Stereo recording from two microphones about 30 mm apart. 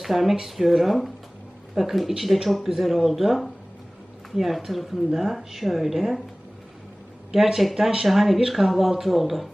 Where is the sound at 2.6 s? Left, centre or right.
Centre.